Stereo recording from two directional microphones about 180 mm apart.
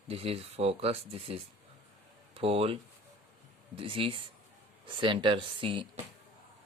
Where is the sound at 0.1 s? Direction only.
35° right (ahead or behind).